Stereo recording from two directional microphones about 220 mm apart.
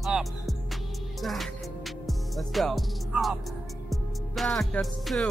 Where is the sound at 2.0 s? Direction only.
Centre (ahead or behind).